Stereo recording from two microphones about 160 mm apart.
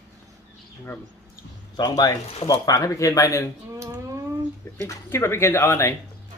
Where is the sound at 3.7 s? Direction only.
20° right (ahead or behind).